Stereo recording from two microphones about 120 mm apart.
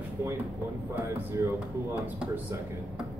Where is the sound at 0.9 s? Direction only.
20° right (ahead or behind).